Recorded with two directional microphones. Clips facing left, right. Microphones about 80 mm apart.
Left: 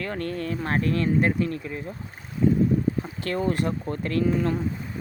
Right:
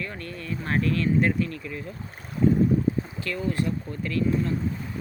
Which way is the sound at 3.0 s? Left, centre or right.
Left.